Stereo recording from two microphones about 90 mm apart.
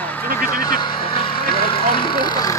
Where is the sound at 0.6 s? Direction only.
60° left (ahead or behind).